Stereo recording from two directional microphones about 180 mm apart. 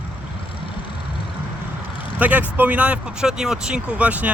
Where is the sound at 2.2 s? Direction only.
10° right (ahead or behind).